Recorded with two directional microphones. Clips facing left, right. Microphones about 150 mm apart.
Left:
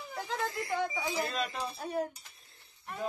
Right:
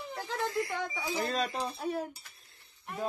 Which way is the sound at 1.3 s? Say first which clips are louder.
Right 3 dB; 30° right (ahead or behind).